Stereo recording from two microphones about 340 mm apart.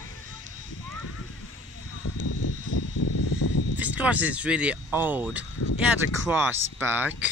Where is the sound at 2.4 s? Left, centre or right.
Left.